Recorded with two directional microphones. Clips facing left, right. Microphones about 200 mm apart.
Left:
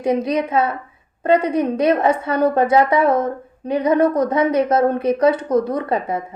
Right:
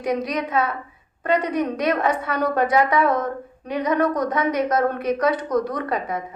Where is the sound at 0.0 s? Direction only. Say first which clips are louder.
Left 5 dB; 25° left (ahead or behind).